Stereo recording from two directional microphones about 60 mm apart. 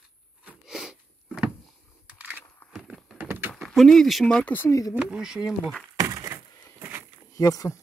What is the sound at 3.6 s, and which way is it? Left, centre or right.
Speech, centre.